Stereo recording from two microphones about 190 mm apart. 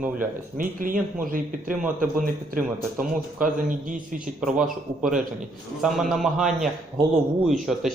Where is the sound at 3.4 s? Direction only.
45° right (ahead or behind).